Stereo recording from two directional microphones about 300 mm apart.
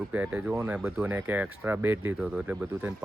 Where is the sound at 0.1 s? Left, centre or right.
Centre.